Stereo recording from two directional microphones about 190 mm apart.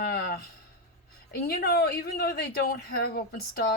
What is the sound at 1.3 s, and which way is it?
Speech, 55° left (ahead or behind).